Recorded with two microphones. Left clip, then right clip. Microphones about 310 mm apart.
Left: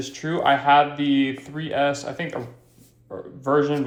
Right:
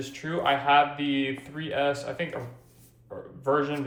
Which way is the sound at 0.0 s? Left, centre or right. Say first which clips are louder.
Left 5 dB; left.